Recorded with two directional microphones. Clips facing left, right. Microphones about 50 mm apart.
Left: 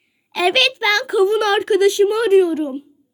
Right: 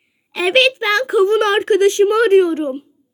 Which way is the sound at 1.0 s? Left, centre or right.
Right.